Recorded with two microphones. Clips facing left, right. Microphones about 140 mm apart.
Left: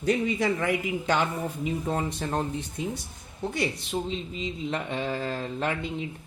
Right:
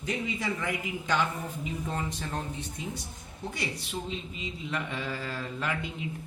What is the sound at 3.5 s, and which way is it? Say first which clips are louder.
A man's voice: left 7 dB; 35° left (ahead or behind).